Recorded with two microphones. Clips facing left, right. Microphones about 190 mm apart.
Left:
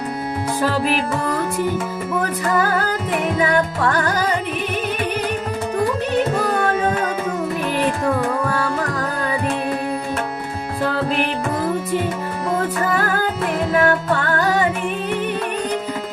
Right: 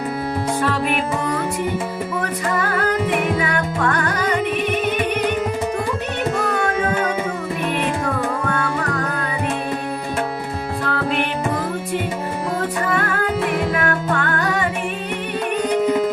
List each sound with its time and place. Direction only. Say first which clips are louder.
3.9 s music: left 2 dB; 35° left (ahead or behind)
13.8 s music: left 3 dB; 35° left (ahead or behind)